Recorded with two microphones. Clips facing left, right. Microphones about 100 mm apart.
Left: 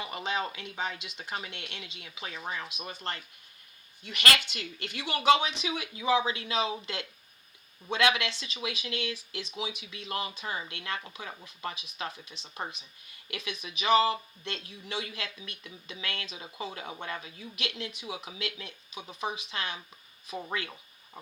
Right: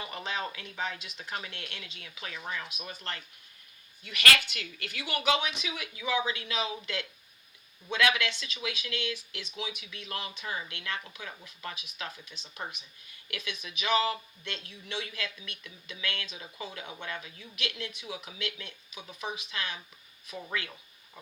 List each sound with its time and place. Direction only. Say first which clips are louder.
0.0 s speech: left 3 dB; 20° left (ahead or behind)
2.3 s speech: left 1 dB; 35° left (ahead or behind)